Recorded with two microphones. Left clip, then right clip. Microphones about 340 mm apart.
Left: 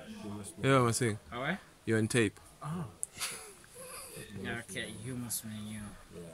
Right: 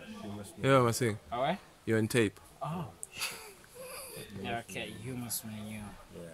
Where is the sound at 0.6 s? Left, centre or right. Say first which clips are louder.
Right 2 dB; centre.